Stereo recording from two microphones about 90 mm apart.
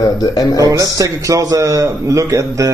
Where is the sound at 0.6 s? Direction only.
40° right (ahead or behind).